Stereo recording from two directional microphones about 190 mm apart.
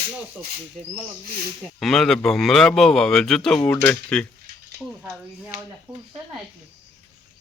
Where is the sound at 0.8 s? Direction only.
Centre (ahead or behind).